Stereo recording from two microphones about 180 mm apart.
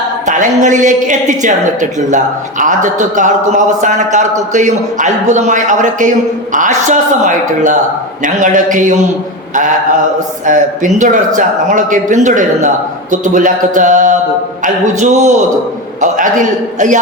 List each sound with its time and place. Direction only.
0.3 s a woman's voice: 45° right (ahead or behind)
10.4 s a woman's voice: 45° right (ahead or behind)